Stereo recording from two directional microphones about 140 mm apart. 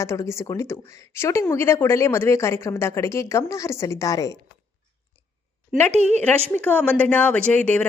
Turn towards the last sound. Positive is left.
turn(degrees=10)  # may be behind; listen again after turning